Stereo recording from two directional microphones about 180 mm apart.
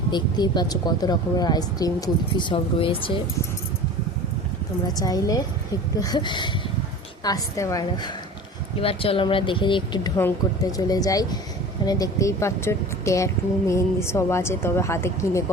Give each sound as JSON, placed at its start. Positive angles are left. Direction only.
{"t": 0.1, "sound": "speech", "side_deg": 25}
{"t": 4.9, "sound": "speech", "side_deg": 20}
{"t": 8.8, "sound": "speech", "side_deg": 30}
{"t": 10.2, "sound": "a woman's voice", "side_deg": 15}